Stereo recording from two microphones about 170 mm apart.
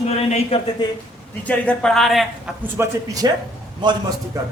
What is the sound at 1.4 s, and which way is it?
Speech, 5° left (ahead or behind).